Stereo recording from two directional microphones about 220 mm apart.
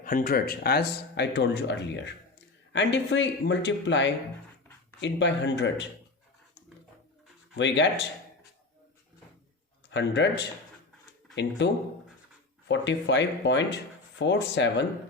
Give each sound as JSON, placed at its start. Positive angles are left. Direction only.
{"t": 0.0, "sound": "speech", "side_deg": 40}
{"t": 7.5, "sound": "speech", "side_deg": 55}
{"t": 9.9, "sound": "speech", "side_deg": 55}